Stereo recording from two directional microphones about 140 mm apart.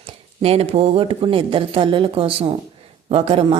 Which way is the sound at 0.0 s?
45° right (ahead or behind).